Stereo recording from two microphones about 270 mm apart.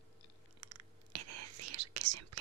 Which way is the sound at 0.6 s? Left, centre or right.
Right.